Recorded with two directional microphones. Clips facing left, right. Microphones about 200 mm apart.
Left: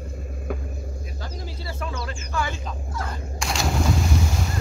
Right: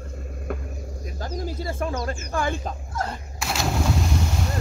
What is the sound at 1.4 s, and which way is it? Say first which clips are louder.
Speech: right 6 dB; 50° right (ahead or behind).